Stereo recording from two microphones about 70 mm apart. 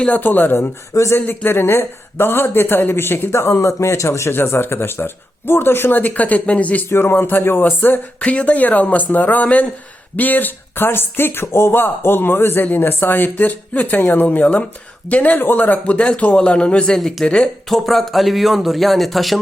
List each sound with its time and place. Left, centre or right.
0.0 s speech: left
0.9 s speech: left
1.2 s a man's voice: left
6.8 s speech: left; by 17.5 s centre
17.7 s speech: centre